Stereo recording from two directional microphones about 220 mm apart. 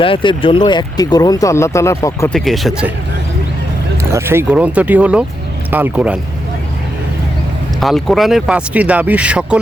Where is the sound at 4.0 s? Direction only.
10° right (ahead or behind).